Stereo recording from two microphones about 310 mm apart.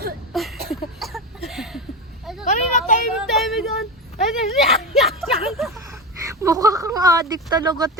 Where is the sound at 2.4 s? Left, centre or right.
Left.